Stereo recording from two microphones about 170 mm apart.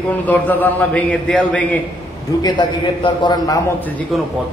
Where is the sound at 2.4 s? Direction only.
25° left (ahead or behind).